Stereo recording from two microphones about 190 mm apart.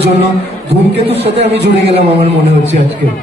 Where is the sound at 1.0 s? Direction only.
30° right (ahead or behind).